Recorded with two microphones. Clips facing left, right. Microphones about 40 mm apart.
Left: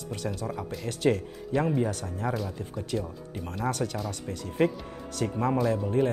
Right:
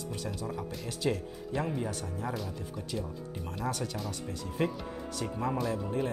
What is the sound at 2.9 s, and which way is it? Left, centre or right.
Speech, left.